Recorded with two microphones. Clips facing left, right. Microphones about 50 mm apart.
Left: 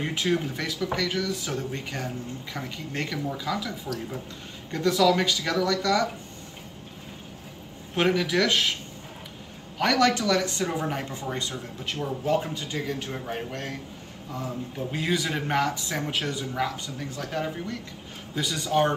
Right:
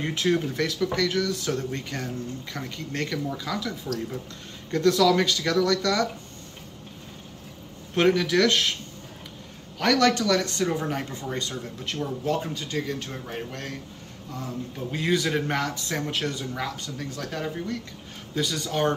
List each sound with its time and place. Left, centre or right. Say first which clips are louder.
0.0 s speech: right 2 dB; centre
7.9 s speech: right 2 dB; centre
9.8 s speech: right 1 dB; centre
15.0 s speech: right 3 dB; centre